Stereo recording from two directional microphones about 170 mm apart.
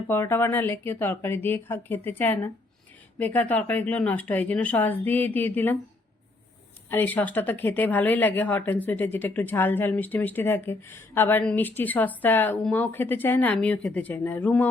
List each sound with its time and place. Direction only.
0.1 s speech: 15° left (ahead or behind)
6.9 s speech: 10° left (ahead or behind)